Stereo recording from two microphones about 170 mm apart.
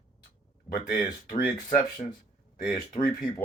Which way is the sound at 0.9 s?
25° left (ahead or behind).